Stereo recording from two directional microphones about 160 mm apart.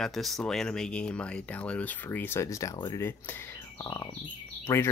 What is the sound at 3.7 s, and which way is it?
Bird, 25° left (ahead or behind).